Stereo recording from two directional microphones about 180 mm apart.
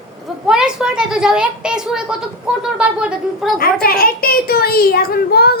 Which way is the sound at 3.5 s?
55° left (ahead or behind).